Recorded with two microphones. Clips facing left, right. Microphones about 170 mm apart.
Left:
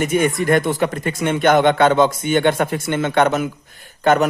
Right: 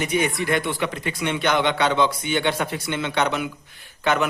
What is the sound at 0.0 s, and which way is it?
A man's voice, 50° left (ahead or behind).